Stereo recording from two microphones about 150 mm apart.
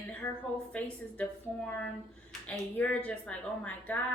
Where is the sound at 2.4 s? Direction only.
10° left (ahead or behind).